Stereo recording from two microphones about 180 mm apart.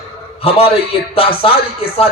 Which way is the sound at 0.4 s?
30° left (ahead or behind).